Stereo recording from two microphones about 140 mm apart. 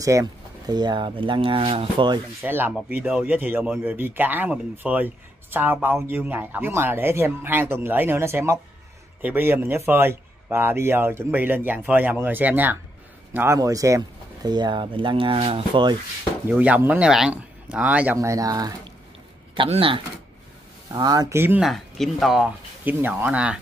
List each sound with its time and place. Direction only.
0.0 s speech: 25° right (ahead or behind)
2.4 s speech: 15° right (ahead or behind); by 16.0 s 35° right (ahead or behind)
16.4 s speech: 10° right (ahead or behind)
19.5 s speech: 40° right (ahead or behind)
21.4 s speech: 15° right (ahead or behind)
21.6 s speech: centre (ahead or behind)